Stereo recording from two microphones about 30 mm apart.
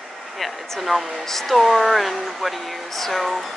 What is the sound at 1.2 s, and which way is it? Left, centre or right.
Speech, centre.